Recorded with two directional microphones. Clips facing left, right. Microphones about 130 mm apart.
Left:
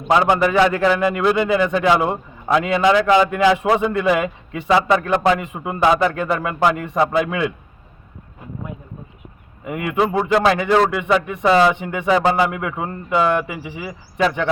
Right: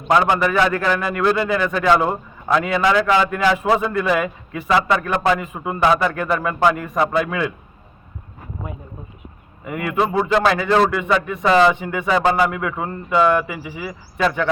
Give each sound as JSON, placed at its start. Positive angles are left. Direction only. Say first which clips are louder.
{"t": 0.1, "sound": "speech", "louder": "left 1 dB", "side_deg": 15}
{"t": 9.6, "sound": "speech", "louder": "even", "side_deg": 20}
{"t": 10.0, "sound": "speech", "louder": "left 1 dB", "side_deg": 10}